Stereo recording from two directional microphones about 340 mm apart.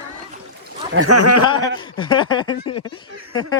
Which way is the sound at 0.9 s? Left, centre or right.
Right.